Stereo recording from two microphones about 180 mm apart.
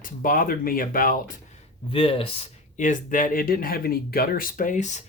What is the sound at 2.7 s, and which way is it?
Speech, 45° left (ahead or behind).